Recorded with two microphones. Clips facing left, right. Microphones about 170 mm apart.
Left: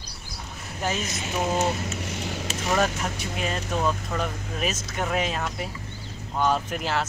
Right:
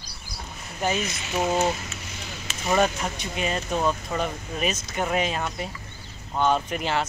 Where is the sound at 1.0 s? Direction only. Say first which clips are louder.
Left 1 dB; 45° left (ahead or behind).